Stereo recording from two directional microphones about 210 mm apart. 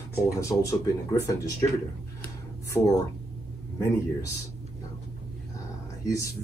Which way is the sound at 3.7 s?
15° left (ahead or behind).